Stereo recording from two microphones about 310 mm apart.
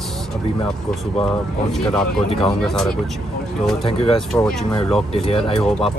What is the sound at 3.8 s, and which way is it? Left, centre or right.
Speech, centre.